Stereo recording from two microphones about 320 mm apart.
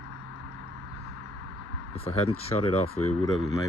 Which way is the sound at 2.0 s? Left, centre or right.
Centre.